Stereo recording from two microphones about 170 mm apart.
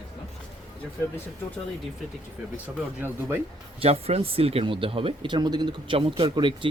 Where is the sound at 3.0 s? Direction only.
10° right (ahead or behind).